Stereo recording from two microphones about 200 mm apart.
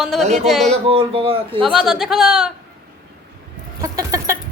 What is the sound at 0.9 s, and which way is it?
Speech, 30° right (ahead or behind).